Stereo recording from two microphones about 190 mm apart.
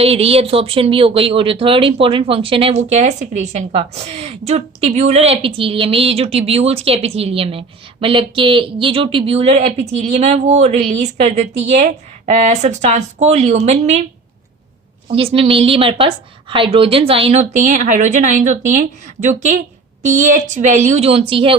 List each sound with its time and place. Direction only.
0.0 s speech: 30° right (ahead or behind)
15.1 s speech: 30° right (ahead or behind)